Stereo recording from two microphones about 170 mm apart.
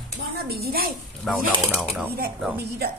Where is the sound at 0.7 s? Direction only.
65° right (ahead or behind).